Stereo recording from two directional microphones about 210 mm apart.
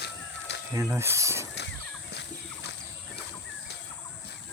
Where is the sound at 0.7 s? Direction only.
10° right (ahead or behind).